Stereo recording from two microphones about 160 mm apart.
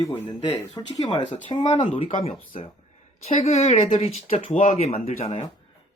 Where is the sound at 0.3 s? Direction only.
30° left (ahead or behind).